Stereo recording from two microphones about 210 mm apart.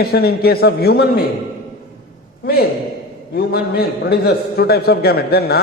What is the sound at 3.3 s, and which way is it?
A man's voice, 50° left (ahead or behind).